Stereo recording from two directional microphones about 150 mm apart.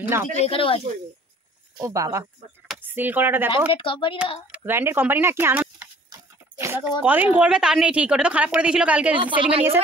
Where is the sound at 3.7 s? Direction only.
35° left (ahead or behind).